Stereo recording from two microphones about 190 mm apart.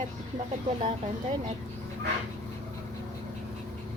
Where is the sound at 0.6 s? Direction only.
30° right (ahead or behind).